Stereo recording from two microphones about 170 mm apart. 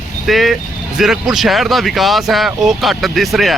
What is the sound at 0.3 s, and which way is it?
Speech, centre (ahead or behind).